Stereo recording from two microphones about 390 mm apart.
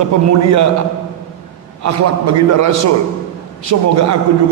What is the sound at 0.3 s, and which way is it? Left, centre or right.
Speech, right.